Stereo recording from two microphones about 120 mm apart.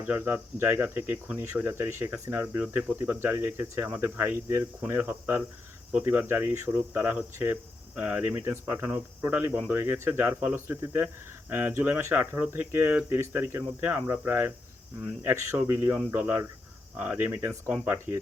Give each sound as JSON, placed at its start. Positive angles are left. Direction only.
{"t": 0.0, "sound": "speech", "side_deg": -15}